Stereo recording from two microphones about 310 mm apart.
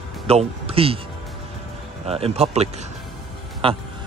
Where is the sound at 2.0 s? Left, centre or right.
Centre.